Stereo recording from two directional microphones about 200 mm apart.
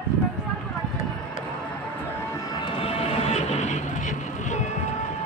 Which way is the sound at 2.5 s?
25° left (ahead or behind).